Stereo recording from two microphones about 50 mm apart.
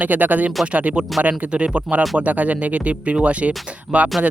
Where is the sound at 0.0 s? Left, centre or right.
Right.